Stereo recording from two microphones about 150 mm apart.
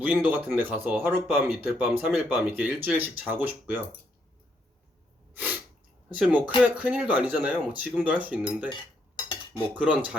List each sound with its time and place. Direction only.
0.0 s speech: 10° right (ahead or behind)
5.3 s sneeze: 10° right (ahead or behind)
6.1 s speech: 10° right (ahead or behind)
8.7 s cutlery: 30° left (ahead or behind)
9.7 s speech: 10° right (ahead or behind)